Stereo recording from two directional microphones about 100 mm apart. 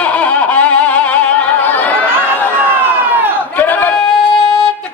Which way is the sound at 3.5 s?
20° left (ahead or behind).